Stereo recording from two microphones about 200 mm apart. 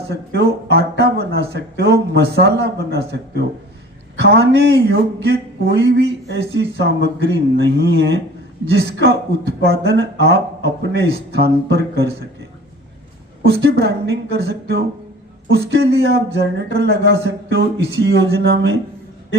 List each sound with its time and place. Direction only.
0.3 s a man's voice: 55° right (ahead or behind)
13.4 s a man's voice: 55° right (ahead or behind)